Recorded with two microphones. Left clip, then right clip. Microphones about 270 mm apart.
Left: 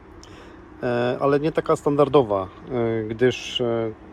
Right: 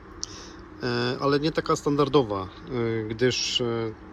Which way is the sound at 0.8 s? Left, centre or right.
Centre.